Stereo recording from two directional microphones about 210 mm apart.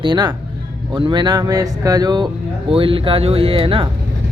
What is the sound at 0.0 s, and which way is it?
Speech, 20° right (ahead or behind).